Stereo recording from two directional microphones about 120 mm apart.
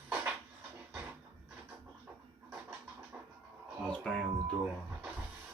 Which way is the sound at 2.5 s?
10° right (ahead or behind).